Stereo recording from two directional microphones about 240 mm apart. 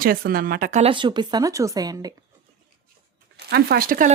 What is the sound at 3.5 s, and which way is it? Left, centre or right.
Speech, right.